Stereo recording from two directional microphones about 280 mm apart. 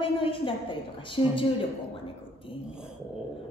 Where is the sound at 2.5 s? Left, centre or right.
Centre.